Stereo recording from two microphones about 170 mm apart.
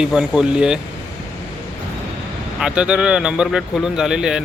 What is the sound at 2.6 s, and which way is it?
A man's voice, 5° right (ahead or behind).